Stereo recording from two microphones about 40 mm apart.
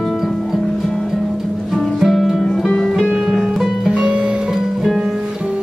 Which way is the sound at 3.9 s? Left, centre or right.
Right.